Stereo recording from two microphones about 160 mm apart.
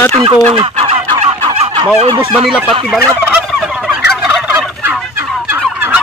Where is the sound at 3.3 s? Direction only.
5° right (ahead or behind).